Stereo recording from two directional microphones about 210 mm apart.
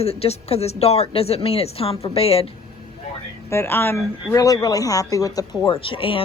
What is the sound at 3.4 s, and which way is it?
Speech, 10° left (ahead or behind).